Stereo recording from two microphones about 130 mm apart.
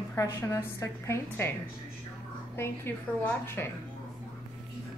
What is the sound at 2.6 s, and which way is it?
A woman's voice, 20° left (ahead or behind).